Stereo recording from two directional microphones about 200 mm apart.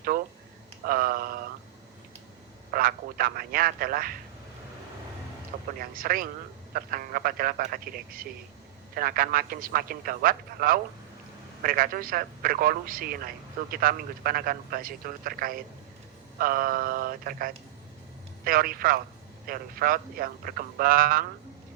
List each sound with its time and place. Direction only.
0.9 s a sound: 45° right (ahead or behind)
2.7 s speech: 45° right (ahead or behind)
5.8 s speech: 45° right (ahead or behind)